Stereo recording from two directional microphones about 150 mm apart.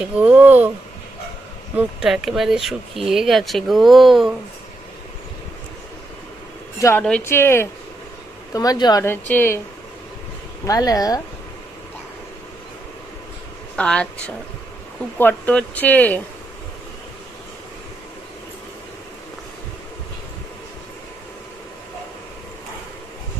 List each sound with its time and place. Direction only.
0.0 s speech: 10° right (ahead or behind)
1.8 s speech: 5° right (ahead or behind)
7.0 s speech: 10° left (ahead or behind); by 9.0 s 25° left (ahead or behind)
9.0 s speech: 15° left (ahead or behind)
10.7 s speech: 25° left (ahead or behind)
13.7 s speech: 10° left (ahead or behind)